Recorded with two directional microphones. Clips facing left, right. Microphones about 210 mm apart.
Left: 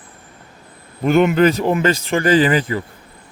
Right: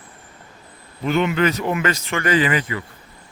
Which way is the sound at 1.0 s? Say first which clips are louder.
Left 6 dB; 45° left (ahead or behind).